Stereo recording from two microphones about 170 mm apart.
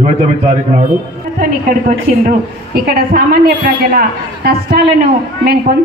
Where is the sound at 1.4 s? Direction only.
60° right (ahead or behind).